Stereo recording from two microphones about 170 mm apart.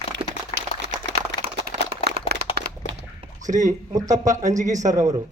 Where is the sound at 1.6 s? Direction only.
70° right (ahead or behind).